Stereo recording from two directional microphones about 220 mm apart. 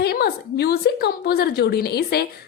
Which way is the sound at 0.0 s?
45° left (ahead or behind).